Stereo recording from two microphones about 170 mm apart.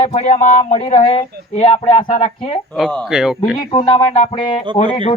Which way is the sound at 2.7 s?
5° left (ahead or behind).